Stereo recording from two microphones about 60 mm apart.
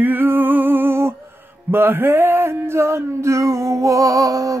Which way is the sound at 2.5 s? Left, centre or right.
Right.